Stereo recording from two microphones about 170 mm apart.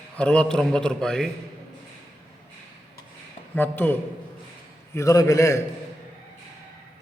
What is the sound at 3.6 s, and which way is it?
A man's voice, 10° left (ahead or behind).